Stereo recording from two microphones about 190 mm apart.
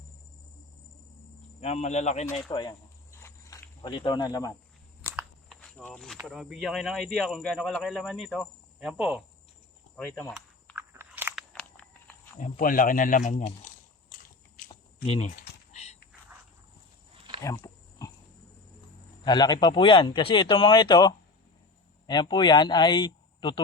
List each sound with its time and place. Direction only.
1.6 s speech: 35° left (ahead or behind)
2.5 s snake: 20° left (ahead or behind)
5.0 s a sound: centre (ahead or behind)
6.2 s speech: centre (ahead or behind)
10.0 s speech: 10° left (ahead or behind)
10.8 s biting: 10° right (ahead or behind)
11.5 s a sound: 5° left (ahead or behind)
12.4 s speech: 45° left (ahead or behind)
15.4 s a sound: 35° left (ahead or behind)
17.4 s pig: 15° left (ahead or behind)
19.2 s a man's voice: 20° left (ahead or behind)